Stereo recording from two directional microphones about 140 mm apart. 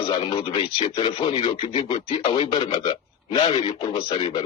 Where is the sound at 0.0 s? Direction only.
35° left (ahead or behind).